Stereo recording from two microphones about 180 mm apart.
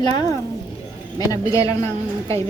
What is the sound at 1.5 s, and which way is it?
Speech, 15° left (ahead or behind).